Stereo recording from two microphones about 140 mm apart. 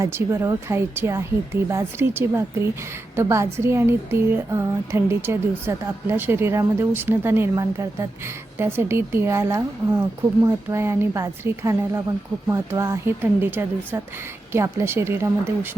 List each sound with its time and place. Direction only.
0.0 s a woman's voice: 20° right (ahead or behind)